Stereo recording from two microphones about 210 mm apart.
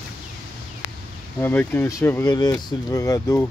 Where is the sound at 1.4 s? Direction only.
10° left (ahead or behind).